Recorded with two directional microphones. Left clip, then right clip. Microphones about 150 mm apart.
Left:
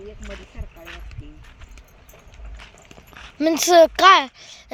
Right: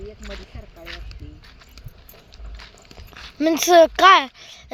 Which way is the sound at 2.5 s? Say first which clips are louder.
Right 1 dB; 5° left (ahead or behind).